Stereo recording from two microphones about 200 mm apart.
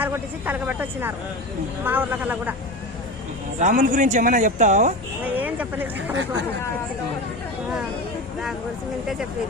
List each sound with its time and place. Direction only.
0.0 s speech: 10° right (ahead or behind)
3.6 s speech: 35° right (ahead or behind)
5.2 s a sound: 10° right (ahead or behind)